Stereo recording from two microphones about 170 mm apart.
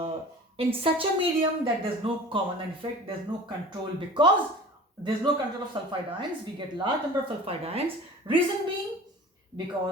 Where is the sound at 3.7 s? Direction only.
25° right (ahead or behind).